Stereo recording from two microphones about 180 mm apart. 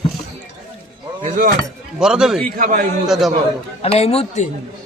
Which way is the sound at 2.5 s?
50° right (ahead or behind).